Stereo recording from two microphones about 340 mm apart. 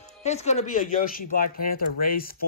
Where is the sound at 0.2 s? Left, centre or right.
Centre.